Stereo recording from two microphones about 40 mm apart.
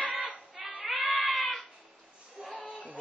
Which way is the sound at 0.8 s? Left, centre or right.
Centre.